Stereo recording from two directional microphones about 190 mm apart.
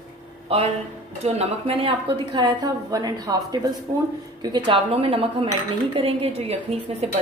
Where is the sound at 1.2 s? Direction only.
30° right (ahead or behind).